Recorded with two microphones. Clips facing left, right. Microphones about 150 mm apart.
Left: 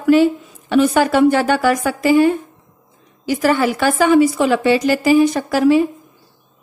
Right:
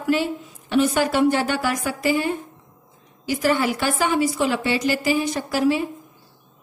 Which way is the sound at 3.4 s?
90° left.